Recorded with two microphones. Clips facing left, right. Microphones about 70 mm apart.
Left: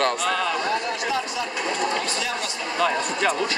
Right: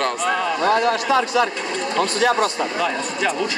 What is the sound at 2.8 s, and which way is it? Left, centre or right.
Speech, centre.